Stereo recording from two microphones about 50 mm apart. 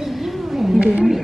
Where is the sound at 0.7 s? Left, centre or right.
Centre.